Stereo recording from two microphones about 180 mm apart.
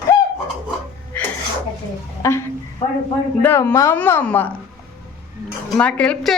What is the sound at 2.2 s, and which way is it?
Speech, 15° left (ahead or behind).